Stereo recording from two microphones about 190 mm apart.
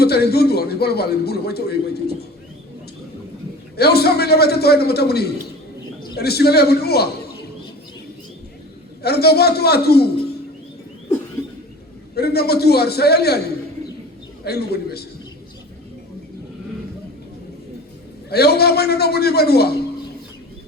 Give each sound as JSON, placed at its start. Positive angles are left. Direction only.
{"t": 0.0, "sound": "a man's voice", "side_deg": 55}
{"t": 3.8, "sound": "a man's voice", "side_deg": 55}
{"t": 9.0, "sound": "a man's voice", "side_deg": 55}
{"t": 12.1, "sound": "a man's voice", "side_deg": 55}
{"t": 14.4, "sound": "a man's voice", "side_deg": 55}
{"t": 18.3, "sound": "a man's voice", "side_deg": 55}